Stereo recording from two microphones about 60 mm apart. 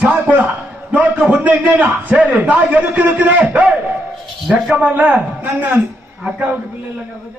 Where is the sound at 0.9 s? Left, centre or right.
Right.